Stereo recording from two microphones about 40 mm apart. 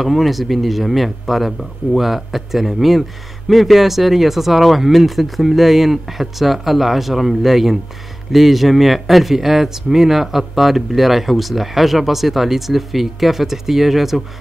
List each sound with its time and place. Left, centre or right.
0.0 s speech: centre